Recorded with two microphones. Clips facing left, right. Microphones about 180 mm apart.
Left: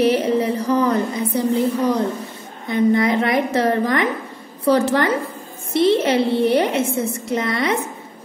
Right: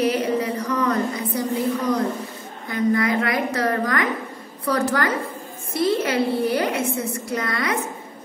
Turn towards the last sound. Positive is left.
turn(degrees=25)  # may be behind; listen again after turning